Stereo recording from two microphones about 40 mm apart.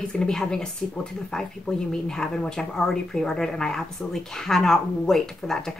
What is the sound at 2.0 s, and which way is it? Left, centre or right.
A woman's voice, centre.